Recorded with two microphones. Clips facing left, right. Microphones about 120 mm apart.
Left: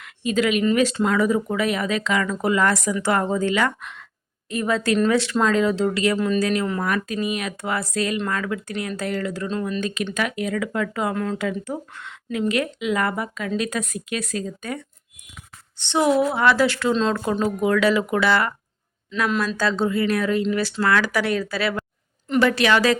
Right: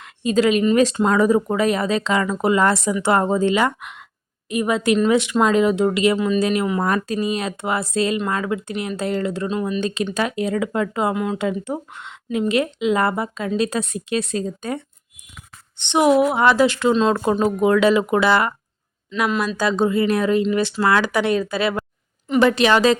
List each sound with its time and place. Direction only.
0.0 s a woman's voice: 30° right (ahead or behind)
6.1 s speech: 5° right (ahead or behind)
6.4 s speech: 20° right (ahead or behind)
6.8 s speech: 35° right (ahead or behind)
9.5 s a woman's voice: 15° right (ahead or behind)
9.8 s speech: 30° right (ahead or behind)
11.1 s a woman's voice: 10° right (ahead or behind)
11.3 s speech: 25° right (ahead or behind)
15.8 s a woman's voice: 20° right (ahead or behind)
17.4 s speech: 25° right (ahead or behind)
19.5 s speech: 15° right (ahead or behind)